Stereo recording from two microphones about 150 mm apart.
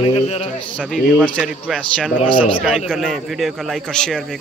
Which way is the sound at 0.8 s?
10° right (ahead or behind).